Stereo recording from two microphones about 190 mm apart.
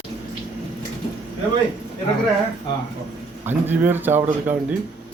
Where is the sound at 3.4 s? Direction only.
10° right (ahead or behind).